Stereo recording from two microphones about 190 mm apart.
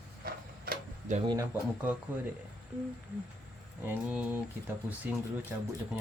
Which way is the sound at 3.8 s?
10° right (ahead or behind).